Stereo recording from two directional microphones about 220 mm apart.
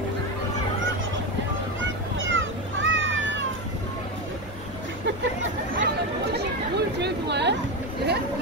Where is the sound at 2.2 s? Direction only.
60° right (ahead or behind).